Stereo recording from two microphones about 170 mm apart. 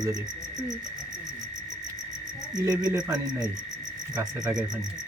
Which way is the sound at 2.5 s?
20° right (ahead or behind).